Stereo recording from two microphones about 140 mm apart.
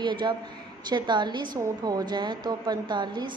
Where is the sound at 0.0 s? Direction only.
35° right (ahead or behind).